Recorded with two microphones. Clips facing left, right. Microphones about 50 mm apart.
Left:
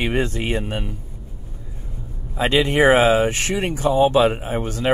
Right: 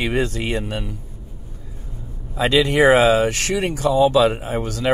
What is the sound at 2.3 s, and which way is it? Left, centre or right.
Speech, left.